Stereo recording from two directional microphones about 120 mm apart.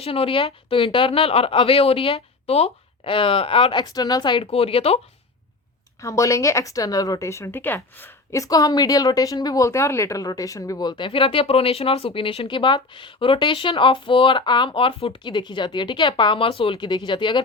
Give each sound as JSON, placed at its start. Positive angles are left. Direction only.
{"t": 0.0, "sound": "a woman's voice", "side_deg": 50}
{"t": 4.4, "sound": "speech", "side_deg": 55}
{"t": 6.0, "sound": "a woman's voice", "side_deg": 25}